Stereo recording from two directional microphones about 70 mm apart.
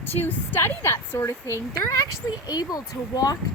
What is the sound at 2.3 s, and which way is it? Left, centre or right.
Speech, left.